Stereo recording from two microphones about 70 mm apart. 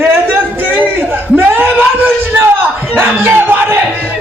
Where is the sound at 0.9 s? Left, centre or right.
Right.